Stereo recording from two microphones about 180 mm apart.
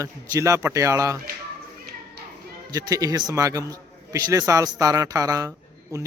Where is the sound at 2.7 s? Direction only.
20° right (ahead or behind).